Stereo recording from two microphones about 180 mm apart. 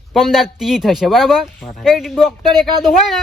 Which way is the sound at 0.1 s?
Centre (ahead or behind).